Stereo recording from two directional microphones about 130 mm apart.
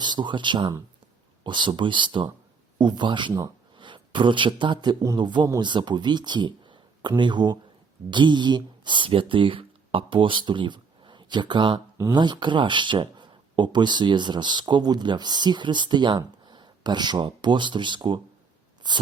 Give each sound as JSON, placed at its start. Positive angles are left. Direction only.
{"t": 0.0, "sound": "speech", "side_deg": -35}